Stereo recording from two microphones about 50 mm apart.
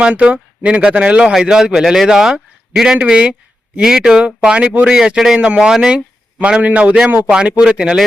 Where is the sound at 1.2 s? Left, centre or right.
Centre.